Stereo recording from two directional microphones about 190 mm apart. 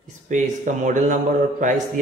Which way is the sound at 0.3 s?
40° right (ahead or behind).